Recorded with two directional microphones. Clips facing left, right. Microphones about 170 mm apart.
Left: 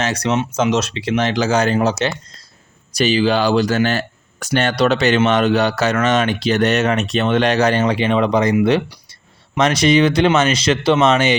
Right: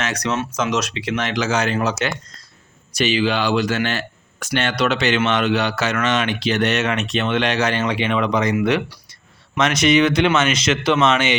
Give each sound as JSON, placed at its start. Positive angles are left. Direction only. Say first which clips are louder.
{"t": 0.0, "sound": "speech", "louder": "left 4 dB", "side_deg": 30}
{"t": 9.6, "sound": "speech", "louder": "left 2 dB", "side_deg": 35}